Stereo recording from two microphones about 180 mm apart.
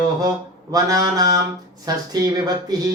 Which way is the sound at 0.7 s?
20° right (ahead or behind).